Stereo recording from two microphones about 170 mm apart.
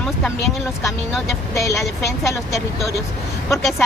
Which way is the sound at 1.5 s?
15° left (ahead or behind).